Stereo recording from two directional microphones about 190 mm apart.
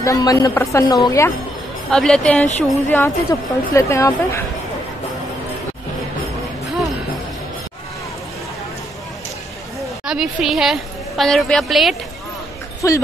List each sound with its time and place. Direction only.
0.0 s a woman's voice: 20° left (ahead or behind)
1.9 s a woman's voice: 5° left (ahead or behind)
2.9 s a woman's voice: 15° left (ahead or behind)
10.0 s a woman's voice: centre (ahead or behind)
12.8 s a woman's voice: 15° left (ahead or behind)